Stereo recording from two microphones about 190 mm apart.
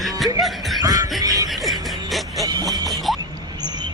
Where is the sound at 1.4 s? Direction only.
Centre (ahead or behind).